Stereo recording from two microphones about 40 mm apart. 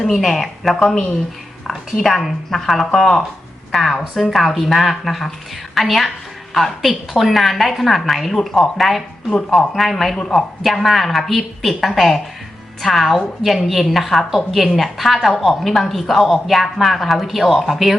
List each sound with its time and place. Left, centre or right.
0.0 s a woman's voice: centre
8.4 s speech: centre
8.8 s a woman's voice: centre